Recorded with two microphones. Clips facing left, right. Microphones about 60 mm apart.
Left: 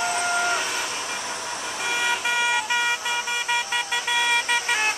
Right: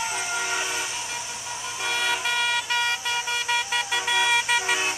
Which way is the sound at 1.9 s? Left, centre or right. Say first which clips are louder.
Left 1 dB; centre.